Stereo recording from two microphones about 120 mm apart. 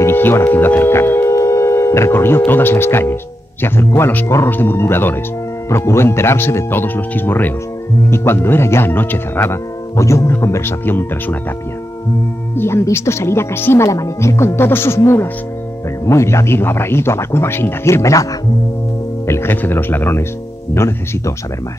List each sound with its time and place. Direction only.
0.0 s speech: 20° left (ahead or behind)
12.5 s speech: 20° left (ahead or behind)
19.2 s speech: 20° left (ahead or behind)